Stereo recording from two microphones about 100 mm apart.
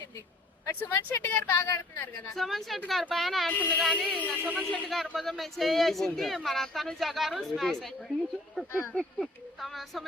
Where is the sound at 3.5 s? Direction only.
15° left (ahead or behind).